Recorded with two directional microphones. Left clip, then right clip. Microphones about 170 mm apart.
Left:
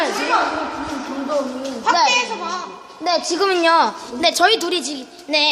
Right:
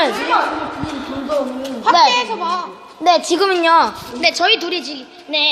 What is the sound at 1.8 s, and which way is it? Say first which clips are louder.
Speech: right 4 dB; 30° right (ahead or behind).